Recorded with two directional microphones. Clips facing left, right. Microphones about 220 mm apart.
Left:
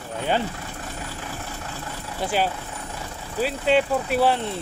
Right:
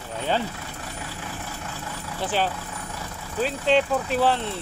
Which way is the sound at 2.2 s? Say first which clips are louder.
Left 1 dB; 10° left (ahead or behind).